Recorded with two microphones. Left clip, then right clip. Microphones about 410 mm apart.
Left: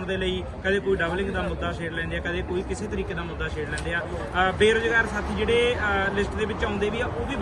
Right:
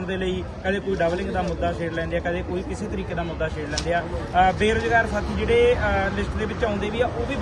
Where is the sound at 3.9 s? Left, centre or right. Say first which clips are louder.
Right 7 dB; centre.